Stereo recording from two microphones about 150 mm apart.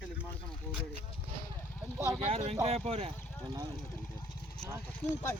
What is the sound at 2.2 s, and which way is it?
Speech, 45° right (ahead or behind).